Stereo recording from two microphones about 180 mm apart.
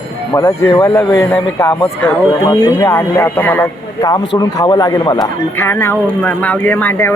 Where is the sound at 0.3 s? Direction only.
15° left (ahead or behind).